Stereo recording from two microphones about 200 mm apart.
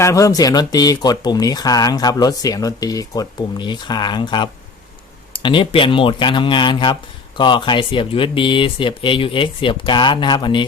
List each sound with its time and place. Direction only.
0.0 s speech: 15° left (ahead or behind)